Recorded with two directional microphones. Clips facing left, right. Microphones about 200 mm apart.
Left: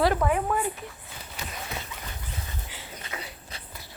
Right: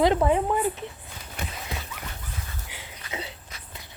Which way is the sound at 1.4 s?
55° right (ahead or behind).